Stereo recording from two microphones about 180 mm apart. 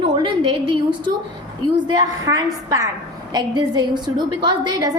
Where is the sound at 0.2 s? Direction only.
25° right (ahead or behind).